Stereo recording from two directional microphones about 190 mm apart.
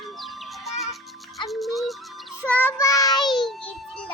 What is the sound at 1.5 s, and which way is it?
Music, centre (ahead or behind).